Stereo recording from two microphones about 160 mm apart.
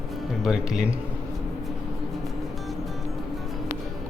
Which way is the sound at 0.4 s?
5° right (ahead or behind).